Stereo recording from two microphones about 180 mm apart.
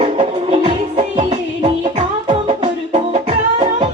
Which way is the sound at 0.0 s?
35° right (ahead or behind).